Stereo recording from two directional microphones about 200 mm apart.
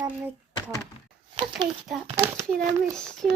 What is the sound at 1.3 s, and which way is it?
Speech, 25° right (ahead or behind).